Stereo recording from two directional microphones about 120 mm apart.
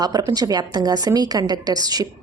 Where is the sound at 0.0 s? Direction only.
30° right (ahead or behind).